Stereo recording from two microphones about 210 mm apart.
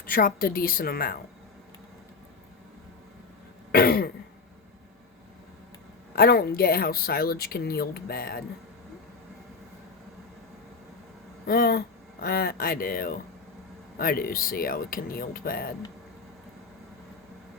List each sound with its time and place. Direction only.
0.0 s speech: 45° left (ahead or behind)
3.7 s throat clearing: 45° left (ahead or behind)
6.1 s speech: 45° left (ahead or behind)
11.4 s speech: 45° left (ahead or behind)